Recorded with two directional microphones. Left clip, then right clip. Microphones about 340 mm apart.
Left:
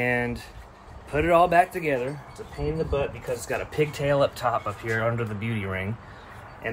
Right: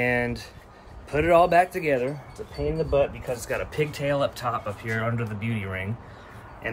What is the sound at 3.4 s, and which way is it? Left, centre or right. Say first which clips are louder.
Speech: left 1 dB; centre.